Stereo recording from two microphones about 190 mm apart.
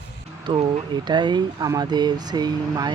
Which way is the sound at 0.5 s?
25° right (ahead or behind).